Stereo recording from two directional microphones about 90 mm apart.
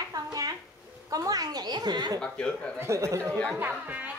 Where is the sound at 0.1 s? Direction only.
45° right (ahead or behind).